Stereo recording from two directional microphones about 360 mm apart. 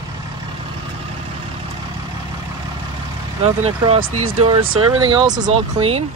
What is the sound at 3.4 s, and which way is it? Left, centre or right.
Speech, centre.